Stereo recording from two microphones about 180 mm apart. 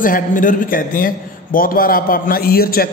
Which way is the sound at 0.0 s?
50° left (ahead or behind).